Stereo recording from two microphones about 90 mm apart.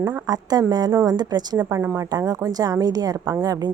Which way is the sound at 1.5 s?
30° right (ahead or behind).